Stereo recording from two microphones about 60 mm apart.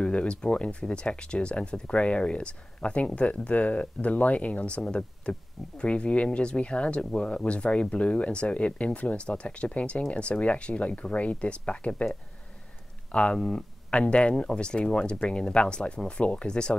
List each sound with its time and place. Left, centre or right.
0.0 s speech: centre
13.1 s speech: centre